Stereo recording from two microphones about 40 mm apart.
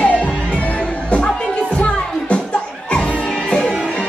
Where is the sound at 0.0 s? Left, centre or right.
Left.